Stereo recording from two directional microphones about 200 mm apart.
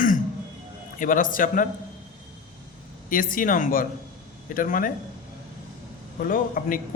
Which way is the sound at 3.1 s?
45° left (ahead or behind).